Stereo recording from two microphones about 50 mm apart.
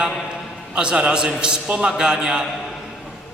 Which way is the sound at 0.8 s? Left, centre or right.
Centre.